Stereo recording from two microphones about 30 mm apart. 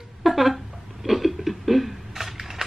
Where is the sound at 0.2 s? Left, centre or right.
Centre.